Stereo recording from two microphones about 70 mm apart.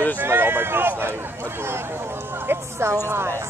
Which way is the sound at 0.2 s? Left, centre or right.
Right.